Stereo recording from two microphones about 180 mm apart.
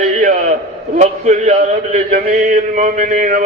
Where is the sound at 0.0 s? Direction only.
45° right (ahead or behind).